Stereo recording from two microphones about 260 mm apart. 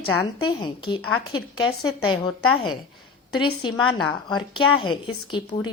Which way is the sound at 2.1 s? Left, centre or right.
Centre.